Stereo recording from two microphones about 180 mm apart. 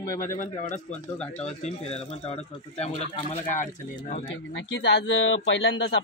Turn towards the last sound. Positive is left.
turn(degrees=90)